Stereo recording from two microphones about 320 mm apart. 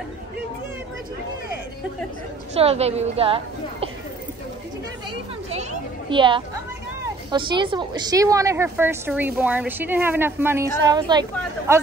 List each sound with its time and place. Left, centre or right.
2.5 s a woman's voice: centre
5.1 s a sound: centre
7.2 s a woman's voice: centre